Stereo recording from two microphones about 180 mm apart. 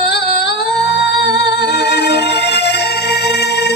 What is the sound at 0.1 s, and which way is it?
Music, 70° left (ahead or behind).